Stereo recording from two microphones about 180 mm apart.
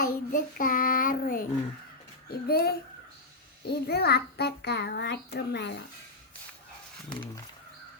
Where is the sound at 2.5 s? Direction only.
60° left (ahead or behind).